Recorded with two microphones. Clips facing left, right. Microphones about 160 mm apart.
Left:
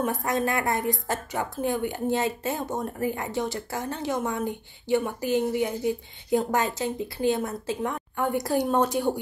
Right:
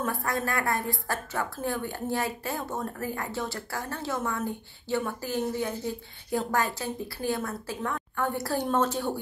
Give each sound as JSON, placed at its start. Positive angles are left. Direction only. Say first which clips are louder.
{"t": 0.0, "sound": "a woman's voice", "louder": "left 4 dB", "side_deg": 20}